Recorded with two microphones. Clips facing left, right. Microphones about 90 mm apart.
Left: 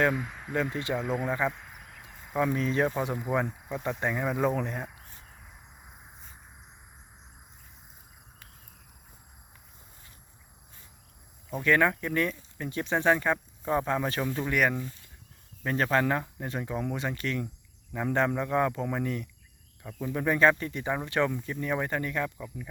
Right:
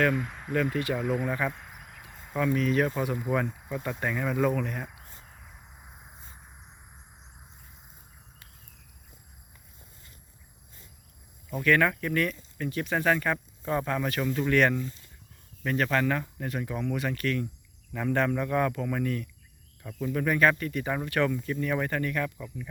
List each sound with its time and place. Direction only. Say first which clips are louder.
0.1 s speech: right 2 dB; centre (ahead or behind)
0.5 s speech: right 2 dB; 20° left (ahead or behind)
0.9 s speech: right 1 dB; 5° right (ahead or behind)
1.5 s cricket: left 2 dB; centre (ahead or behind)
2.6 s speech: right 1 dB; 25° left (ahead or behind)
3.3 s speech: even; 15° left (ahead or behind)
5.3 s cricket: right 1 dB; centre (ahead or behind)
11.5 s speech: even; 20° left (ahead or behind)
14.5 s speech: right 3 dB; 10° left (ahead or behind)
15.6 s speech: even; 25° left (ahead or behind)
19.8 s speech: right 2 dB; 10° left (ahead or behind)
20.2 s speech: left 1 dB; 25° left (ahead or behind)